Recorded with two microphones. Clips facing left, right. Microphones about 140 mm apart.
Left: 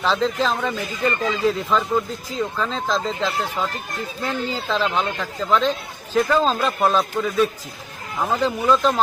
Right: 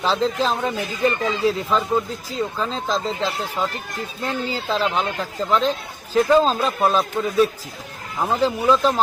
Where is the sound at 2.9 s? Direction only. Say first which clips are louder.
Even; 35° right (ahead or behind).